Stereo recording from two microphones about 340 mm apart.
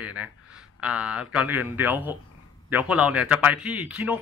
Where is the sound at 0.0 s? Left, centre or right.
Centre.